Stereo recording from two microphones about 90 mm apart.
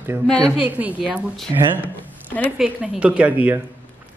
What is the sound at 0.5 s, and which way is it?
A man's voice, 15° right (ahead or behind).